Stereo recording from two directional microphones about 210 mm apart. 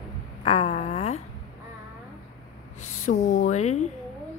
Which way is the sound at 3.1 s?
35° left (ahead or behind).